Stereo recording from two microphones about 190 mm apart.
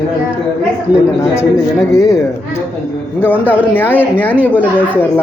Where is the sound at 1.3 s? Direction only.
15° left (ahead or behind).